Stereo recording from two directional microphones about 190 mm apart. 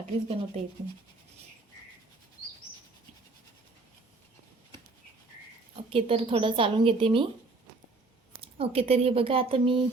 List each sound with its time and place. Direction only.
0.0 s speech: 35° right (ahead or behind)
5.9 s speech: 30° right (ahead or behind)
8.4 s speech: 30° right (ahead or behind)